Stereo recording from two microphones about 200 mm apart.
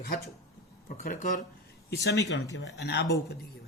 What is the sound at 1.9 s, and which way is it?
A man's voice, 55° left (ahead or behind).